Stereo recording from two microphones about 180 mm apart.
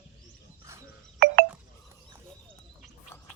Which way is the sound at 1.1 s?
60° right (ahead or behind).